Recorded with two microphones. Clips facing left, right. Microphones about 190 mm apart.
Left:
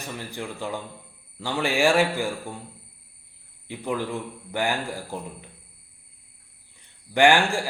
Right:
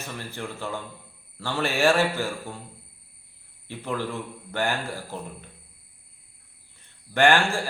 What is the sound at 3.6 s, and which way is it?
Speech, 15° left (ahead or behind).